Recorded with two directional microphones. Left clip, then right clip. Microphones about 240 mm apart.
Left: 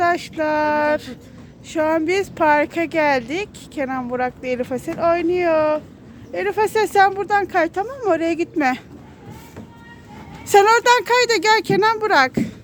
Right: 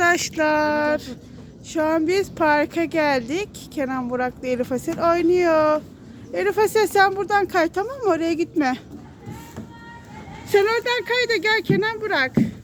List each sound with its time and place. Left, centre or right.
0.0 s speech: centre
10.5 s speech: left